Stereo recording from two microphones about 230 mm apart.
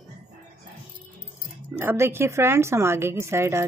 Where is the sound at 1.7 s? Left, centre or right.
Centre.